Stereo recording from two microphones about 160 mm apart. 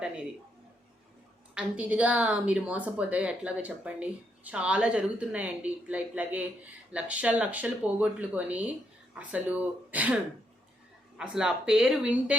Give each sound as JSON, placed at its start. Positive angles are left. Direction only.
{"t": 1.5, "sound": "a woman's voice", "side_deg": -10}
{"t": 11.2, "sound": "speech", "side_deg": -5}